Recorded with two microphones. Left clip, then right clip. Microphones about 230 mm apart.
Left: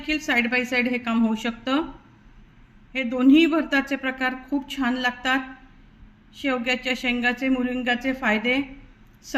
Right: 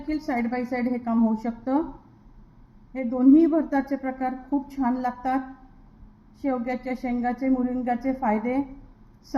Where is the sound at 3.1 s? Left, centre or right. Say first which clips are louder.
Even; left.